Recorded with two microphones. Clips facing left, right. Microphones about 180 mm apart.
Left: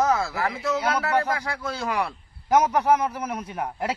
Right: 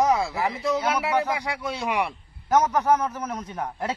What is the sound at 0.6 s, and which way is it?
A man's voice, 10° right (ahead or behind).